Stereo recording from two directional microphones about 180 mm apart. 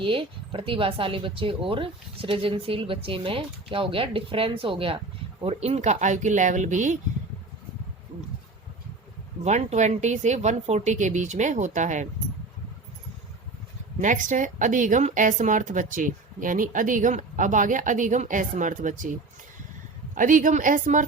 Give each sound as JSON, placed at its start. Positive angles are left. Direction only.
{"t": 0.0, "sound": "speech", "side_deg": -30}
{"t": 9.4, "sound": "speech", "side_deg": -40}
{"t": 14.0, "sound": "a woman's voice", "side_deg": -45}
{"t": 20.1, "sound": "a woman's voice", "side_deg": -45}